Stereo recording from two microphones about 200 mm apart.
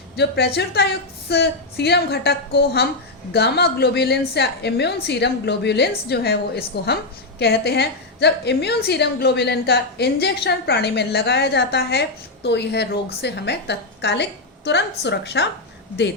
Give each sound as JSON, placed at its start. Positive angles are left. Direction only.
{"t": 0.2, "sound": "a woman's voice", "side_deg": 55}